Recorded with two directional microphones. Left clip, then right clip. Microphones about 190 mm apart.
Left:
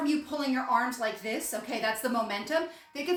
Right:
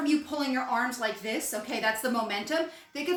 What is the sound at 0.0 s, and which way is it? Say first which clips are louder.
A woman's voice: right 2 dB; 5° left (ahead or behind).